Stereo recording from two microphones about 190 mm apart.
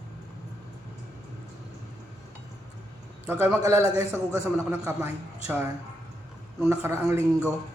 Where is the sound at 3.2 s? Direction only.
10° right (ahead or behind).